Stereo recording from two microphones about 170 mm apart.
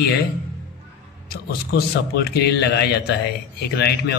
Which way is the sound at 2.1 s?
70° left (ahead or behind).